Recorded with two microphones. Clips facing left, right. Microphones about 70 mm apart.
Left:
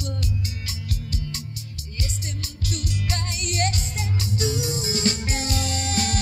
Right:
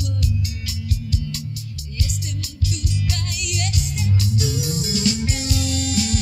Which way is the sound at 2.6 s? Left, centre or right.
Left.